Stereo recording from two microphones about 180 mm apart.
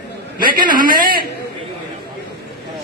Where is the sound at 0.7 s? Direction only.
50° right (ahead or behind).